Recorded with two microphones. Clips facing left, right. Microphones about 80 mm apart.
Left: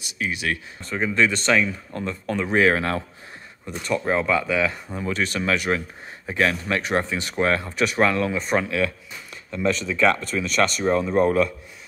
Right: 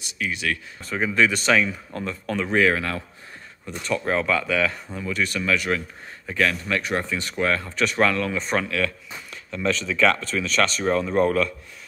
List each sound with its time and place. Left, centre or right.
0.0 s speech: centre
2.5 s speech: left
3.6 s speech: centre
5.0 s speech: left
7.6 s speech: centre
8.4 s speech: centre
8.6 s speech: centre